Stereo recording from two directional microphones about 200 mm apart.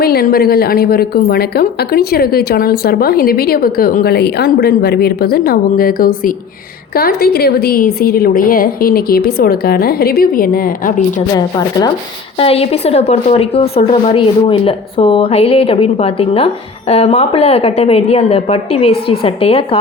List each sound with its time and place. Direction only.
0.0 s a woman's voice: 50° left (ahead or behind)
11.3 s a woman's voice: 20° left (ahead or behind)
12.4 s a woman's voice: 30° left (ahead or behind)